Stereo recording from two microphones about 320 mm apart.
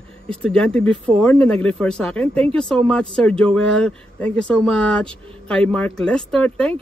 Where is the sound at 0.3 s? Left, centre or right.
Centre.